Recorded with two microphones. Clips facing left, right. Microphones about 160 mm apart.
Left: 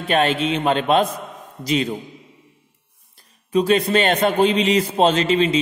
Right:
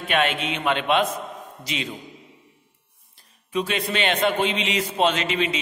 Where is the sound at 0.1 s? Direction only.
35° left (ahead or behind).